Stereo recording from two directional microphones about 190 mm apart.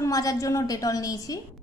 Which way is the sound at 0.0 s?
20° left (ahead or behind).